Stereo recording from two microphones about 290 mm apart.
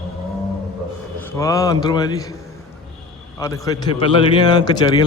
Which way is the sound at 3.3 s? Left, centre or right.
Centre.